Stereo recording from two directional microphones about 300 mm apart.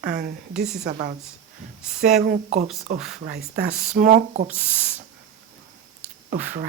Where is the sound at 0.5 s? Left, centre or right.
Centre.